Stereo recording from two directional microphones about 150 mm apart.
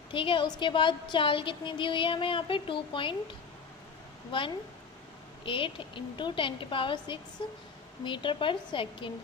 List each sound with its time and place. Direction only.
0.1 s a woman's voice: 35° left (ahead or behind)
4.3 s a woman's voice: 35° left (ahead or behind)